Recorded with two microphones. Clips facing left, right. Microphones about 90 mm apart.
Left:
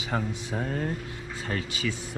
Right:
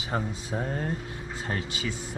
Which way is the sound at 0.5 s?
15° right (ahead or behind).